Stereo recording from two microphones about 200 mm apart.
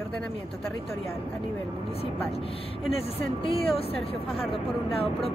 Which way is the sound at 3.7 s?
30° left (ahead or behind).